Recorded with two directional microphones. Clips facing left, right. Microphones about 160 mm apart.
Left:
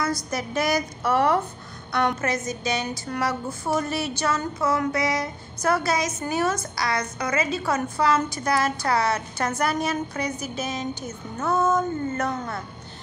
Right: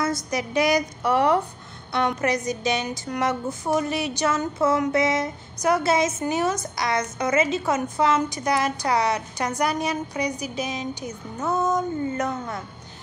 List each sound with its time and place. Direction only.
0.0 s a woman's voice: 20° right (ahead or behind)